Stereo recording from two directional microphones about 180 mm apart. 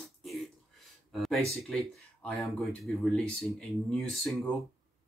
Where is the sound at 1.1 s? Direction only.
Centre (ahead or behind).